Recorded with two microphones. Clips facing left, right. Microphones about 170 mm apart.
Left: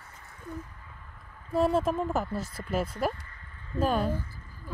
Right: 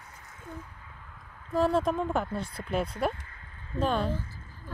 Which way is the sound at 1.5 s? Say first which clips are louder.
Even; 5° left (ahead or behind).